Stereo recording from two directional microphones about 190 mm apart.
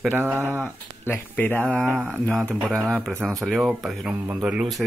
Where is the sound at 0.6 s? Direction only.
10° left (ahead or behind).